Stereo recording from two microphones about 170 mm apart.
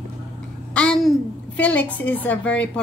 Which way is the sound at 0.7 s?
5° left (ahead or behind).